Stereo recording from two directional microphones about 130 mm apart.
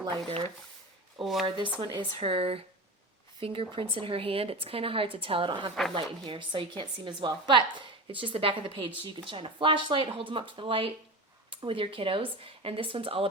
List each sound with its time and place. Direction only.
1.2 s speech: centre (ahead or behind)
1.5 s speech: 40° right (ahead or behind)